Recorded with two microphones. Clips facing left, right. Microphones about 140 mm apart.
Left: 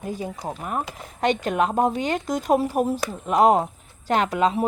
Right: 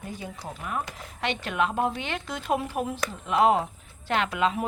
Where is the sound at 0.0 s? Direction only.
40° left (ahead or behind).